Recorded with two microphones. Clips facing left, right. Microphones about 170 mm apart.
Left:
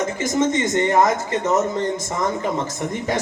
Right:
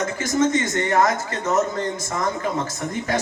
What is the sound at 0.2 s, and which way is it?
Speech, 20° left (ahead or behind).